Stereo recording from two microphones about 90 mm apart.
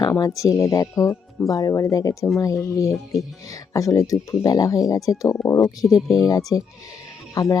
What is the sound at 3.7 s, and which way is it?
Speech, 35° left (ahead or behind).